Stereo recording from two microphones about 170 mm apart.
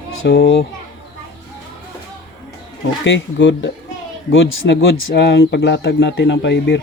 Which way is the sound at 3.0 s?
90° left.